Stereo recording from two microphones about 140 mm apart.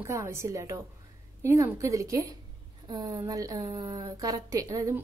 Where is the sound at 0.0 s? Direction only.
20° right (ahead or behind).